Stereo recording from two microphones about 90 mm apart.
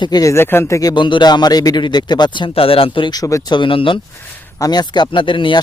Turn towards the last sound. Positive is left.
turn(degrees=65)  # may be behind; listen again after turning